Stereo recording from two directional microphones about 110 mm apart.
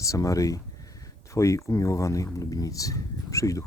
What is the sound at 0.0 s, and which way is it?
Speech, 30° left (ahead or behind).